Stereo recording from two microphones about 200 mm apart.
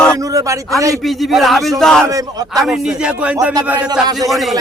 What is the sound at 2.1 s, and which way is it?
Speech, 20° right (ahead or behind).